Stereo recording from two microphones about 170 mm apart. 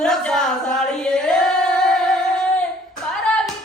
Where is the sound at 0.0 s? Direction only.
5° left (ahead or behind).